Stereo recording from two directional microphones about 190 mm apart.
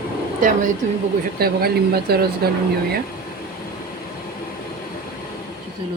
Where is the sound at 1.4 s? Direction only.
55° right (ahead or behind).